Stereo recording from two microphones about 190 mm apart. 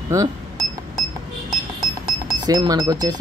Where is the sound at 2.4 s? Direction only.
20° right (ahead or behind).